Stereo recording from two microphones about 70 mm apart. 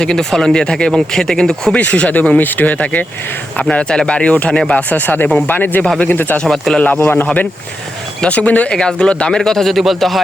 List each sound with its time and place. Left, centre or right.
0.0 s speech: centre
1.7 s speech: left
4.8 s speech: left
6.4 s speech: centre
6.7 s speech: centre
7.0 s speech: left
8.2 s speech: left; by 10.2 s centre